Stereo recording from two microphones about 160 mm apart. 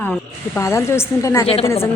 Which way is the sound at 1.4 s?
40° left (ahead or behind).